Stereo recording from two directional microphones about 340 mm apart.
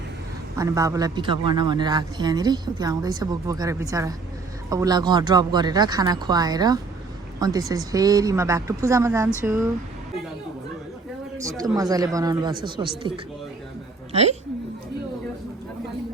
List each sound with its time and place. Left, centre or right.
0.5 s a man's voice: centre
11.3 s a man's voice: centre
14.1 s speech: centre